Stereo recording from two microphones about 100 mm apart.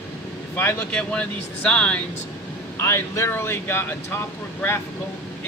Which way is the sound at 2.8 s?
25° left (ahead or behind).